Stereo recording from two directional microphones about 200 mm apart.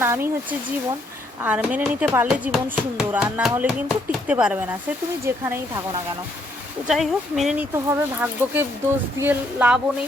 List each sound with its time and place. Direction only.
0.0 s speech: 10° right (ahead or behind)
1.4 s speech: 5° right (ahead or behind)
6.8 s speech: centre (ahead or behind)